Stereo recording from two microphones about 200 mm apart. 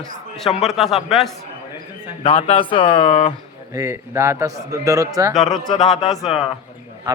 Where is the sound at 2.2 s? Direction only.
25° left (ahead or behind).